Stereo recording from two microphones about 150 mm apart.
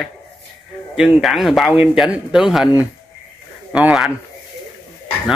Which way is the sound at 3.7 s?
5° right (ahead or behind).